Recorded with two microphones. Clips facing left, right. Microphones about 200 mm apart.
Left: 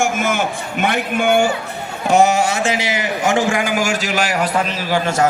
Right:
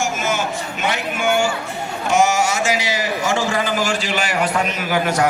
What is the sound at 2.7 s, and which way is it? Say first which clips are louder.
A man's voice: left 1 dB; 25° left (ahead or behind).